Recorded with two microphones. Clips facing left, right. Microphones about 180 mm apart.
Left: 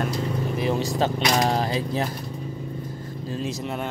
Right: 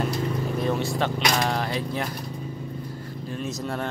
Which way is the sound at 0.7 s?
35° left (ahead or behind).